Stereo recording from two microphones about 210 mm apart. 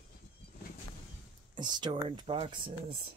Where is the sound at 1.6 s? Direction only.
20° right (ahead or behind).